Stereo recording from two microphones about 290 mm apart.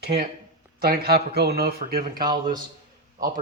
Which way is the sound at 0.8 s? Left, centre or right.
Right.